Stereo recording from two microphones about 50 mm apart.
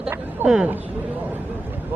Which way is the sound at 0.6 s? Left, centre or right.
Right.